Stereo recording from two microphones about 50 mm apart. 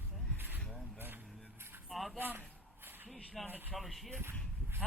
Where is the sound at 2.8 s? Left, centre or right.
Right.